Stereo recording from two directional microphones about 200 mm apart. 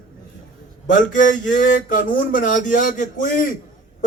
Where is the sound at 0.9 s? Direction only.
40° left (ahead or behind).